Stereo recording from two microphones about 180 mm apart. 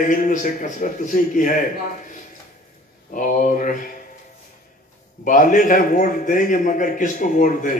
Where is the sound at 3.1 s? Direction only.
50° left (ahead or behind).